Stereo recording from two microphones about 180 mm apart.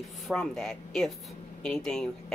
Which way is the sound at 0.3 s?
5° left (ahead or behind).